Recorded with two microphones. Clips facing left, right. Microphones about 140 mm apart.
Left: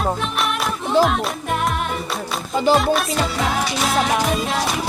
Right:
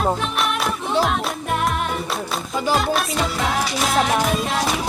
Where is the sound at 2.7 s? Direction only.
Centre (ahead or behind).